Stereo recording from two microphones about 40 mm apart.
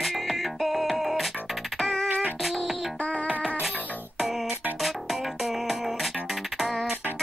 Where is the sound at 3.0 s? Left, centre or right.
Left.